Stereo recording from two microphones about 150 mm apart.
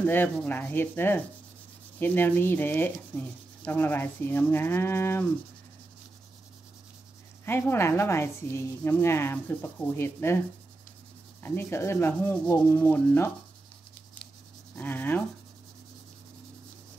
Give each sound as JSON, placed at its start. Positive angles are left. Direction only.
{"t": 0.0, "sound": "sanding", "side_deg": 15}
{"t": 7.4, "sound": "sanding", "side_deg": 15}
{"t": 11.4, "sound": "sanding", "side_deg": 15}
{"t": 14.8, "sound": "sanding", "side_deg": 15}